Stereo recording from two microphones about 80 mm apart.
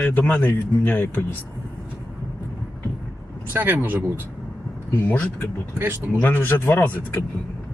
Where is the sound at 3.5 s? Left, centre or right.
Right.